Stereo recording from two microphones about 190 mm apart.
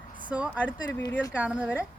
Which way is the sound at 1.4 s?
5° right (ahead or behind).